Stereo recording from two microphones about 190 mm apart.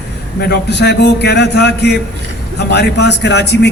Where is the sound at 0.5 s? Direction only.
65° left (ahead or behind).